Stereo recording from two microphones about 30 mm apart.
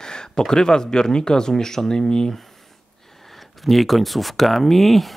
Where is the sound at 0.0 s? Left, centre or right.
Left.